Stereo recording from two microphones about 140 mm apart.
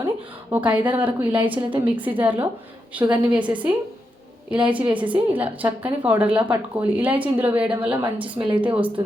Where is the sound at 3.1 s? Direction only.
10° right (ahead or behind).